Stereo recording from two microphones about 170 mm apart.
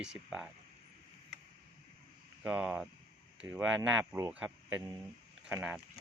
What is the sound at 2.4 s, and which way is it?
Speech, 10° right (ahead or behind).